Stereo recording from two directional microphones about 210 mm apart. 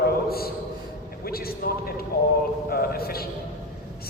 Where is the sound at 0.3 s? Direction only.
45° left (ahead or behind).